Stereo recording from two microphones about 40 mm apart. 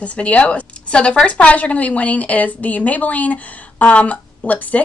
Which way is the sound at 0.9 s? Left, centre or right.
Left.